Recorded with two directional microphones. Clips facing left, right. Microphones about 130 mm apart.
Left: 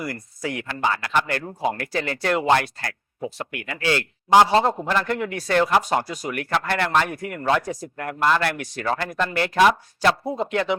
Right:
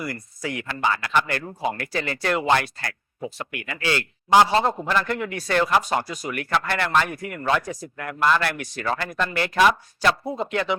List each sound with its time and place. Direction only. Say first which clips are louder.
0.0 s speech: left 1 dB; 45° left (ahead or behind)